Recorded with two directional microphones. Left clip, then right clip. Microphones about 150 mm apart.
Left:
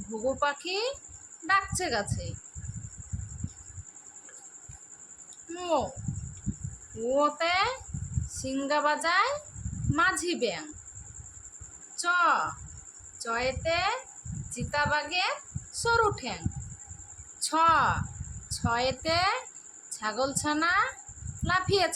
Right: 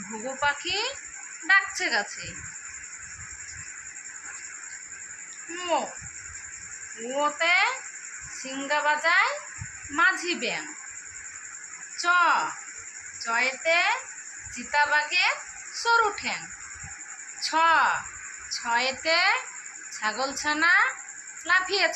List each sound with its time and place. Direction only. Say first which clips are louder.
0.3 s a woman's voice: right 3 dB; 75° left (ahead or behind)
5.5 s a woman's voice: right 2 dB; 90° left
7.2 s a woman's voice: right 4 dB; 90° left
11.9 s a woman's voice: right 3 dB; 90° left
17.4 s a woman's voice: right 2 dB; 85° left